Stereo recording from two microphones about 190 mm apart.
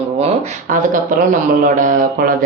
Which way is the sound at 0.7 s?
45° right (ahead or behind).